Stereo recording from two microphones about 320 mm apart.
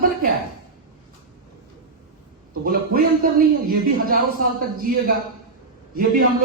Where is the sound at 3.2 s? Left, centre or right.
Right.